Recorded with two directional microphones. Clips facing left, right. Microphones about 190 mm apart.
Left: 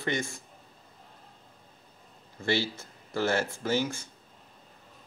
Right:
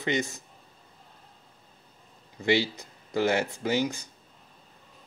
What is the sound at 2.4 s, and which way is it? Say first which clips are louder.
Speech: right 4 dB; 15° right (ahead or behind).